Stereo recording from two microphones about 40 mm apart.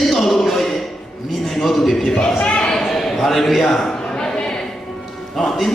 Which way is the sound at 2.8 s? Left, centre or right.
Centre.